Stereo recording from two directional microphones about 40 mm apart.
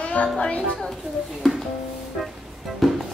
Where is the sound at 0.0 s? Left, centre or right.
Left.